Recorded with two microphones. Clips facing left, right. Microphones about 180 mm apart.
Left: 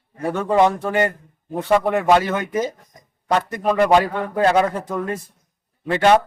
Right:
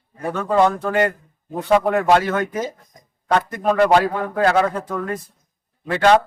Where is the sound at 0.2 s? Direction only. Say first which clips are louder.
Left 1 dB; 25° left (ahead or behind).